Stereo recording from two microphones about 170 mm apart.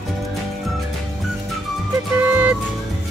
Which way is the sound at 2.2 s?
10° right (ahead or behind).